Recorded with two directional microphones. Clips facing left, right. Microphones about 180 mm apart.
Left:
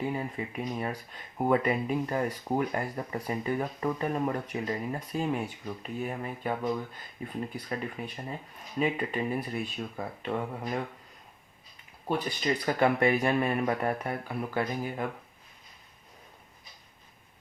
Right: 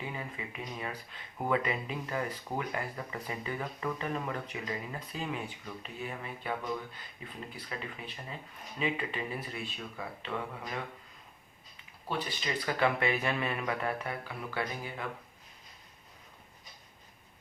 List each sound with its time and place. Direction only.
0.0 s speech: 40° left (ahead or behind)
12.0 s speech: 45° left (ahead or behind)